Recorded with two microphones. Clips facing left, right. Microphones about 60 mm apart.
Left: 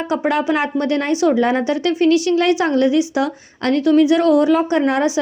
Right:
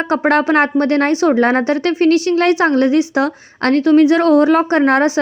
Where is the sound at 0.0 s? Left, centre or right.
Right.